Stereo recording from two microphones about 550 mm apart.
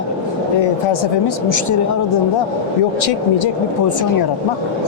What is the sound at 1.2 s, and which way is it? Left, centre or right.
Speech, left.